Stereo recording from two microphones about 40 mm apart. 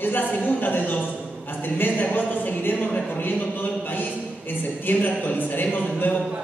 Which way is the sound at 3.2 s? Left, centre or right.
Left.